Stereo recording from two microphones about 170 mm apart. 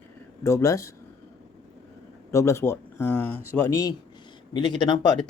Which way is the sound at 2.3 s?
15° left (ahead or behind).